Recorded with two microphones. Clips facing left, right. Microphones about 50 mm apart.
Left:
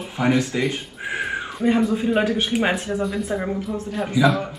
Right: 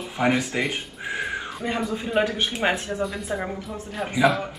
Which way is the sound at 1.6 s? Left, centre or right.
Centre.